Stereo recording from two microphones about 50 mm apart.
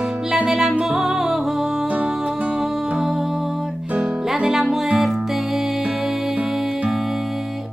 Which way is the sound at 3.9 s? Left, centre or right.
Right.